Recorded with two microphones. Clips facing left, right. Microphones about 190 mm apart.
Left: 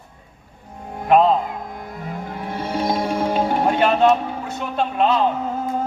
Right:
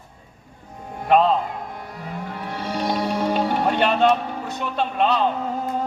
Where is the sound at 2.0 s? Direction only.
40° left (ahead or behind).